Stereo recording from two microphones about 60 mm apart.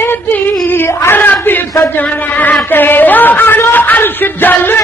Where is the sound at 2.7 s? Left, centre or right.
Left.